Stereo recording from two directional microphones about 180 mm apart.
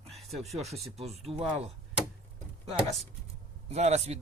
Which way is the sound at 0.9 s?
35° right (ahead or behind).